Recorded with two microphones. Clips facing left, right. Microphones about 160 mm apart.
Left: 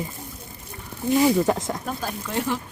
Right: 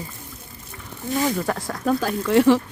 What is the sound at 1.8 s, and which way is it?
Speech, 90° right.